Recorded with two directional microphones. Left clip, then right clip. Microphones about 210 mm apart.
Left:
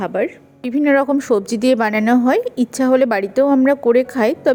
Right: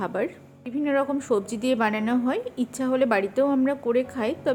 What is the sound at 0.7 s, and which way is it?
A woman's voice, 35° left (ahead or behind).